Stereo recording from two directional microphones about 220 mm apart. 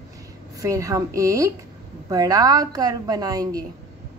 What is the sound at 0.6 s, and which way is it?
A woman's voice, 15° right (ahead or behind).